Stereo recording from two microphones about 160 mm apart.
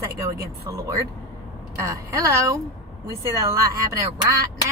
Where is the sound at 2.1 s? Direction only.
20° right (ahead or behind).